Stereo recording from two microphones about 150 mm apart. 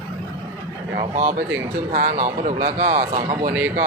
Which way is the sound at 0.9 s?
50° right (ahead or behind).